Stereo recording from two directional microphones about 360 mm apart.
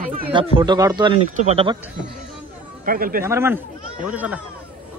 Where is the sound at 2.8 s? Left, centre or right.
Right.